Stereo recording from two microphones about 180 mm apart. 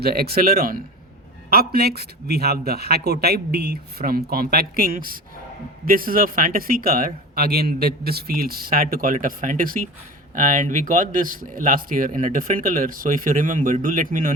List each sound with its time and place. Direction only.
0.0 s a man's voice: 60° right (ahead or behind)